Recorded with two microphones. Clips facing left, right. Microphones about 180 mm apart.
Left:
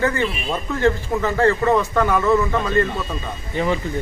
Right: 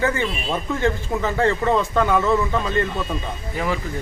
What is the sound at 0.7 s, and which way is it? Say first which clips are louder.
Speech: left 4 dB; 15° right (ahead or behind).